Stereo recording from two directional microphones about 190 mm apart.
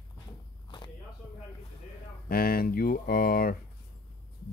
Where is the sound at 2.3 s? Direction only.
50° left (ahead or behind).